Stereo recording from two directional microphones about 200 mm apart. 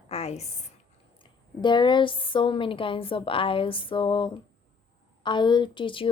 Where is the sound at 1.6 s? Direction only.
25° left (ahead or behind).